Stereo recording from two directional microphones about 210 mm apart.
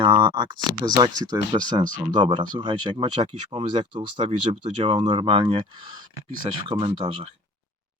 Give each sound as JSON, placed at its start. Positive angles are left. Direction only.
{"t": 0.0, "sound": "speech", "side_deg": -25}